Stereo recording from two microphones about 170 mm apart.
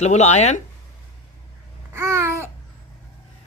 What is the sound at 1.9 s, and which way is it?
Babbling, 15° right (ahead or behind).